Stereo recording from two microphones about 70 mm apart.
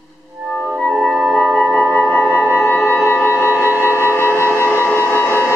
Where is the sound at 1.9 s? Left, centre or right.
Left.